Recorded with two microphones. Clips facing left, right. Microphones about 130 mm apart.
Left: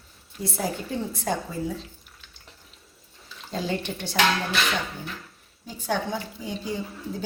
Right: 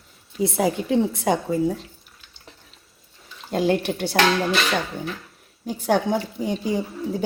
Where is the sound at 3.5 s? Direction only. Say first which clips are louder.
Right 8 dB; 55° right (ahead or behind).